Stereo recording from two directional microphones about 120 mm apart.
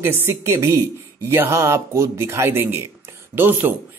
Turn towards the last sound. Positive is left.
turn(degrees=-15)  # may be behind; listen again after turning